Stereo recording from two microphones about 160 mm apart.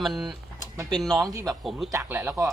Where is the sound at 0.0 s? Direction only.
Centre (ahead or behind).